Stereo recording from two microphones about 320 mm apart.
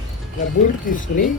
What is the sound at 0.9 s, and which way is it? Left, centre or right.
Speech, left.